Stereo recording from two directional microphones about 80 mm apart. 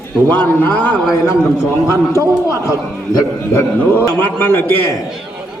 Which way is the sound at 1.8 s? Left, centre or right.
Left.